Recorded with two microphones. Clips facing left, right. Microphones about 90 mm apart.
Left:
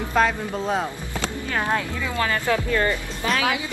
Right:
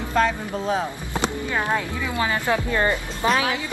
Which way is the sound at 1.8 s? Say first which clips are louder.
Even; 15° right (ahead or behind).